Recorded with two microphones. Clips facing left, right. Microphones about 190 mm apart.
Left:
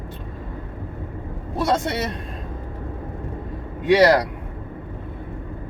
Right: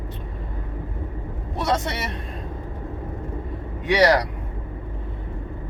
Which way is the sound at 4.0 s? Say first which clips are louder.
Left 1 dB; 55° left (ahead or behind).